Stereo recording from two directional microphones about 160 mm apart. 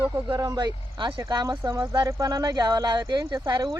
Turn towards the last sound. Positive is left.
turn(degrees=-25)  # may be behind; listen again after turning